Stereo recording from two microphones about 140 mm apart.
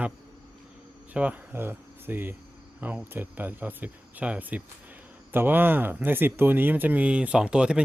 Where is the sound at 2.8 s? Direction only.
15° right (ahead or behind).